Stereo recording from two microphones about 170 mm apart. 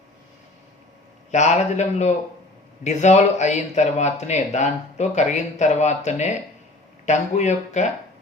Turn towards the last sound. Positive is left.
turn(degrees=45)  # may be behind; listen again after turning